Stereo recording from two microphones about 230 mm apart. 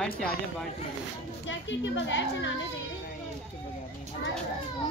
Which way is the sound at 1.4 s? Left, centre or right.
Left.